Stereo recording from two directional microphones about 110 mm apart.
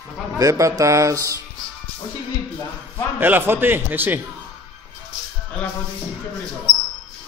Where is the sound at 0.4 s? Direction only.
30° right (ahead or behind).